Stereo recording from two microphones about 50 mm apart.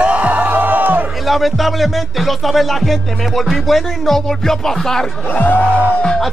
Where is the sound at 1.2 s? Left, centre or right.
Centre.